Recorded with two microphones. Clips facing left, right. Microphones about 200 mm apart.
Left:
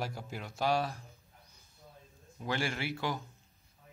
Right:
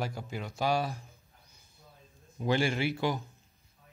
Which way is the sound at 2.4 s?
20° right (ahead or behind).